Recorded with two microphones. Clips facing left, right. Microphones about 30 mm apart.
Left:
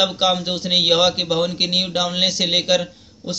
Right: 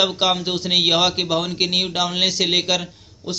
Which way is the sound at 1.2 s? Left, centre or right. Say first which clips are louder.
Left 1 dB; centre.